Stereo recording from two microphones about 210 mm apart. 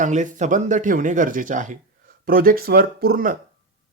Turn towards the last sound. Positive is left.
turn(degrees=-45)  # may be behind; listen again after turning